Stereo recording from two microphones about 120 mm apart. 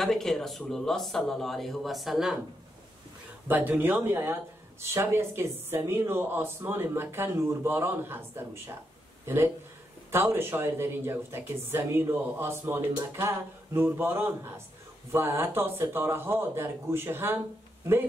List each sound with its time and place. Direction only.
0.0 s speech: centre (ahead or behind)
3.4 s a man's voice: 15° right (ahead or behind)